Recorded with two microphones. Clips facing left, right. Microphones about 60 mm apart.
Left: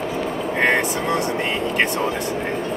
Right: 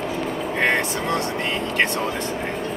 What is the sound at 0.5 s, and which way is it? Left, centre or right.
Speech, centre.